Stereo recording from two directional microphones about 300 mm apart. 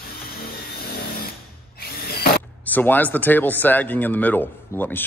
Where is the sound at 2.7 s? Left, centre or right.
Centre.